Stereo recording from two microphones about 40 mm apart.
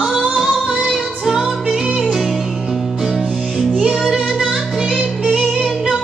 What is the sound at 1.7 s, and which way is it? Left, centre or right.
Music, right.